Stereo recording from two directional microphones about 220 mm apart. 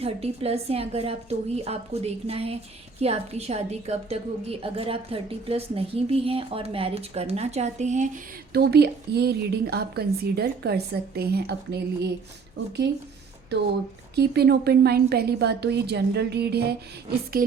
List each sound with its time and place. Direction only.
0.0 s a woman's voice: 25° right (ahead or behind)
8.5 s a woman's voice: 50° right (ahead or behind)
14.2 s a woman's voice: 45° right (ahead or behind)
17.4 s music: 40° right (ahead or behind)